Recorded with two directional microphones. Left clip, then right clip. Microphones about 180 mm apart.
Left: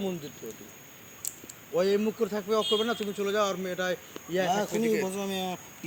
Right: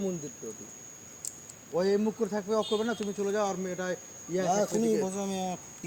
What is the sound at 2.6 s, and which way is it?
Speech, 25° right (ahead or behind).